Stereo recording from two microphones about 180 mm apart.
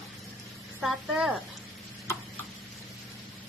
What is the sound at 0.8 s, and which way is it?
Speech, 5° right (ahead or behind).